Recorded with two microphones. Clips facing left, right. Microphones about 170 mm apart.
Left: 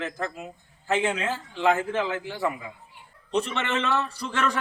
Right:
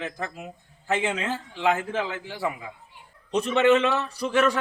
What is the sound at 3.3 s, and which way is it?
Speech, 15° right (ahead or behind).